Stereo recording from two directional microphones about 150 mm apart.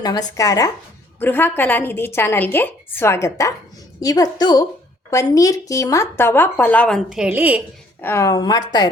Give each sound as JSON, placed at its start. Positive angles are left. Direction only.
{"t": 0.0, "sound": "a woman's voice", "side_deg": 25}
{"t": 8.0, "sound": "a woman's voice", "side_deg": 20}